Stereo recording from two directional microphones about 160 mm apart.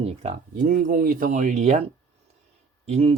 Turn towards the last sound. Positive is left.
turn(degrees=-40)  # may be behind; listen again after turning